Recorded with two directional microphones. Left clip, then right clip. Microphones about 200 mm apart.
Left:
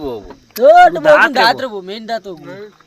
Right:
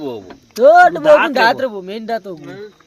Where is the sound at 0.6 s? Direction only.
10° right (ahead or behind).